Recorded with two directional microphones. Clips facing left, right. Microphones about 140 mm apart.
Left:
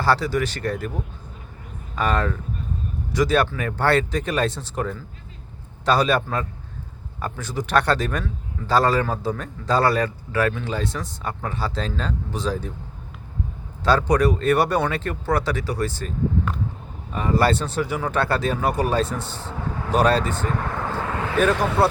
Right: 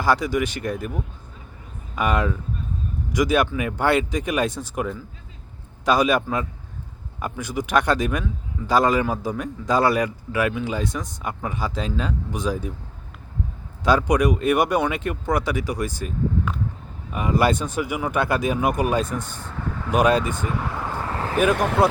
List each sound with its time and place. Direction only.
0.0 s a man's voice: 15° right (ahead or behind)
13.8 s a man's voice: 15° right (ahead or behind)
21.5 s speech: 65° right (ahead or behind)